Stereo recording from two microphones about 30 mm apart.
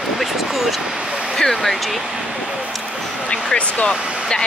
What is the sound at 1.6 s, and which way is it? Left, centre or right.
Speech, centre.